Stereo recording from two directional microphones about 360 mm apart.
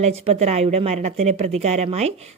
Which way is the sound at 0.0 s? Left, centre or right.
Centre.